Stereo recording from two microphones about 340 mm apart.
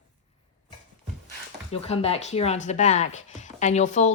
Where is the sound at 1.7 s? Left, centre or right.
Centre.